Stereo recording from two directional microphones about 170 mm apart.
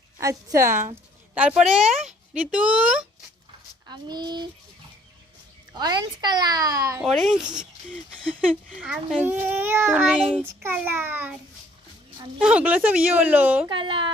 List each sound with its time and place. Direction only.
0.2 s a child's voice: 20° right (ahead or behind)
1.4 s a woman's voice: 5° right (ahead or behind)
3.8 s speech: 25° right (ahead or behind)
5.7 s speech: 25° right (ahead or behind)
7.0 s a woman's voice: centre (ahead or behind)
12.4 s a child's voice: 5° right (ahead or behind)
13.7 s speech: 30° right (ahead or behind)